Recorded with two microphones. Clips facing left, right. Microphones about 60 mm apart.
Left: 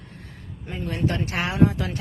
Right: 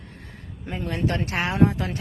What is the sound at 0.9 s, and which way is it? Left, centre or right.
Speech, right.